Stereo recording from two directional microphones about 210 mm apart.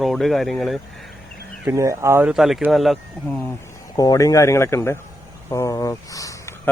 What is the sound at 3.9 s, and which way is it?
Speech, 15° left (ahead or behind).